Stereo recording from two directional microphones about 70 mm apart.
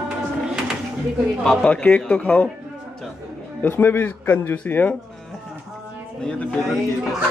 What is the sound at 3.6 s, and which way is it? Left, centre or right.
A man's voice, left.